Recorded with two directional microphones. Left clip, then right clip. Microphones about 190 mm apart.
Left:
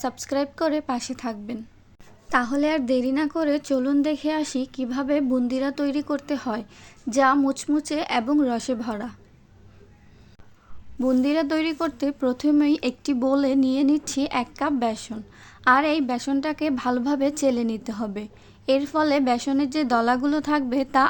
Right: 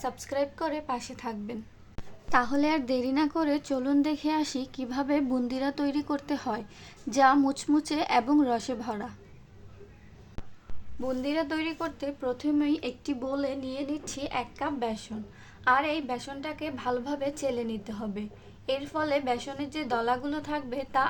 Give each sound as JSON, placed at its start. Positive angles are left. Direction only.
{"t": 0.0, "sound": "a woman's voice", "side_deg": 30}
{"t": 2.3, "sound": "a woman's voice", "side_deg": 15}
{"t": 11.0, "sound": "a woman's voice", "side_deg": 30}